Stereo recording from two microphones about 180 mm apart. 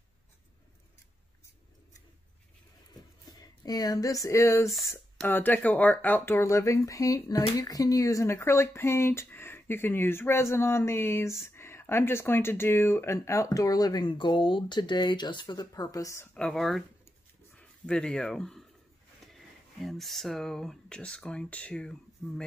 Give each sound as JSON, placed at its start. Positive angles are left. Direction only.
{"t": 2.9, "sound": "a sound", "side_deg": 20}
{"t": 5.1, "sound": "speech", "side_deg": 5}
{"t": 16.3, "sound": "speech", "side_deg": 5}